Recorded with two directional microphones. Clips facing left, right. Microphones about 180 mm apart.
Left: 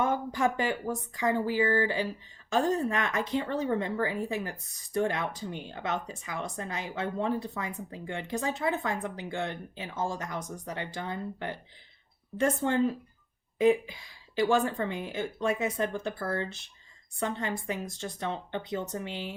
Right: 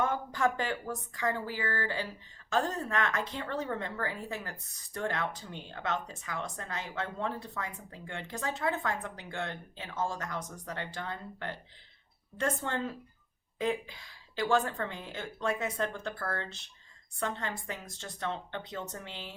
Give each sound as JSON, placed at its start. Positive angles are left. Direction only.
{"t": 0.0, "sound": "speech", "side_deg": 15}